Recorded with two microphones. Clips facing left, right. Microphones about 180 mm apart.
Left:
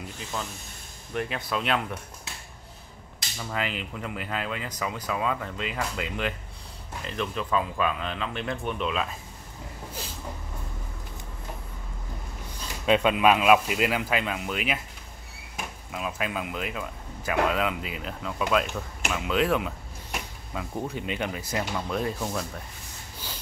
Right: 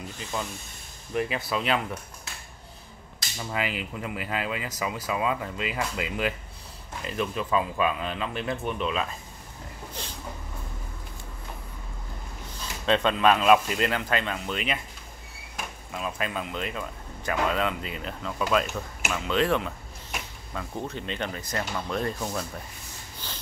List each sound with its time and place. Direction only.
1.1 s speech: 5° right (ahead or behind)
3.3 s speech: 10° right (ahead or behind)
10.0 s vehicle: 5° left (ahead or behind)
12.8 s speech: 10° left (ahead or behind)
15.9 s speech: 5° left (ahead or behind)
23.2 s sniff: 10° left (ahead or behind)